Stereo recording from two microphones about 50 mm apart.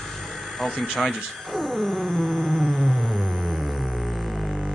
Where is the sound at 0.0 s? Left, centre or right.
Centre.